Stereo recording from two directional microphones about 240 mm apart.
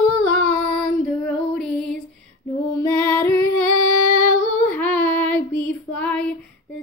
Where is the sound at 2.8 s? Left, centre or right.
Centre.